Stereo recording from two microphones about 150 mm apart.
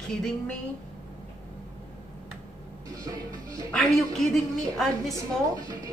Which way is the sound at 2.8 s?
25° right (ahead or behind).